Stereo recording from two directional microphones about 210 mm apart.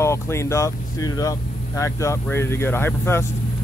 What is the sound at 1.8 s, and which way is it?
Speech, 15° left (ahead or behind).